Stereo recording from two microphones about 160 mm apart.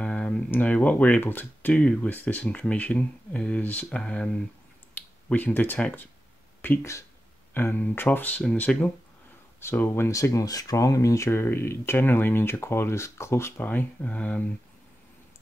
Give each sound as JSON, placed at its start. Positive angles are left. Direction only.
{"t": 0.0, "sound": "speech", "side_deg": 5}
{"t": 5.3, "sound": "speech", "side_deg": 10}